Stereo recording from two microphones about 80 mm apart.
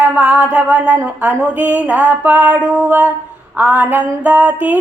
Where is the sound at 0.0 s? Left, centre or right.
Centre.